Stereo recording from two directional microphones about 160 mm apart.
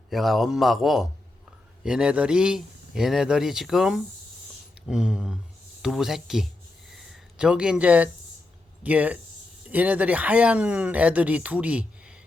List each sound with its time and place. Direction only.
0.1 s a man's voice: centre (ahead or behind)
6.9 s a sound: 5° right (ahead or behind)
8.8 s speech: 10° right (ahead or behind)